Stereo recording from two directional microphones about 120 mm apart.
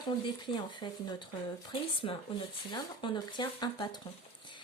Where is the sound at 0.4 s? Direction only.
40° left (ahead or behind).